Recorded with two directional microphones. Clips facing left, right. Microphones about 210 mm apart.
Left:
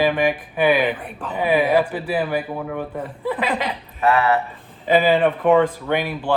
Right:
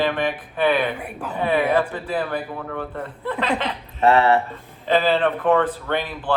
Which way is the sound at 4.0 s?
30° right (ahead or behind).